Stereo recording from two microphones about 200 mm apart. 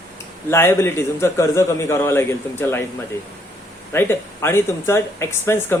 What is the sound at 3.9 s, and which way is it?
A man's voice, 10° left (ahead or behind).